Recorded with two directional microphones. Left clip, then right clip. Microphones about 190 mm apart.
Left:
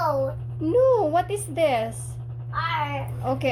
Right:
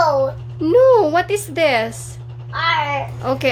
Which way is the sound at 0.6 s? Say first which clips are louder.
Right 8 dB; 25° right (ahead or behind).